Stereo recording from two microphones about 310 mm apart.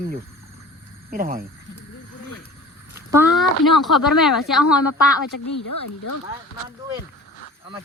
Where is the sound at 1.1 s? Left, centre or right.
Right.